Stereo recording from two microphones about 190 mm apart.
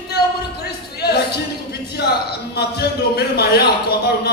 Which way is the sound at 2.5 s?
60° left (ahead or behind).